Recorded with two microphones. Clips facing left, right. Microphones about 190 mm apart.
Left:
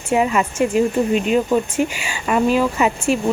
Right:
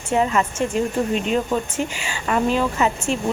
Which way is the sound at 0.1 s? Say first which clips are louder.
Left 2 dB; 10° left (ahead or behind).